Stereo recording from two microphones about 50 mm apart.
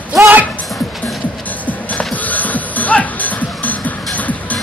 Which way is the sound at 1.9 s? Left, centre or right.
Left.